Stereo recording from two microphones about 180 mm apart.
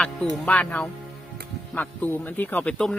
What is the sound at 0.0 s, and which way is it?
Speech, 5° left (ahead or behind).